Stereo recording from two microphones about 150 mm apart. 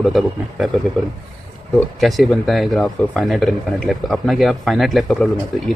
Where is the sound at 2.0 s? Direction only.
Centre (ahead or behind).